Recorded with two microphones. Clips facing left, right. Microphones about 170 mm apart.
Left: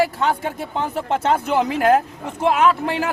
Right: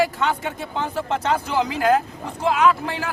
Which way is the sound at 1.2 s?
55° left (ahead or behind).